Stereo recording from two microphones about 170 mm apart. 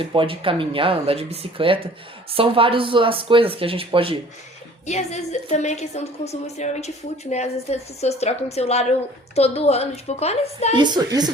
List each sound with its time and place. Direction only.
0.0 s speech: 30° right (ahead or behind)
4.9 s a woman's voice: 40° left (ahead or behind)
10.8 s a woman's voice: 25° right (ahead or behind)